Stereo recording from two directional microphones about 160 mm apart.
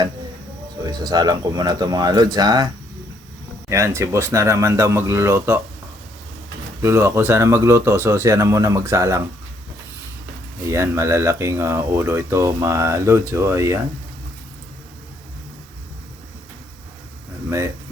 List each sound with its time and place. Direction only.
0.8 s speech: 25° right (ahead or behind)
3.7 s speech: 15° right (ahead or behind)
6.8 s speech: 15° right (ahead or behind)
10.7 s speech: 15° right (ahead or behind)